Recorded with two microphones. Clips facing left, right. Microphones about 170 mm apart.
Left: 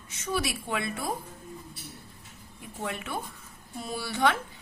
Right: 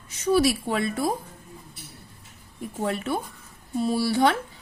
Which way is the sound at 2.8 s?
35° right (ahead or behind).